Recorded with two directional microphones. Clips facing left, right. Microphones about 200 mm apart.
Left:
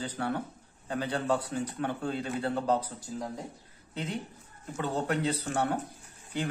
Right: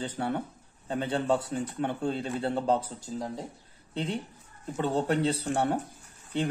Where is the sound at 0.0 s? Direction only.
25° right (ahead or behind).